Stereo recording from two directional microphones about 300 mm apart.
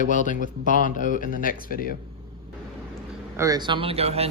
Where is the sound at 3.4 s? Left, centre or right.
Centre.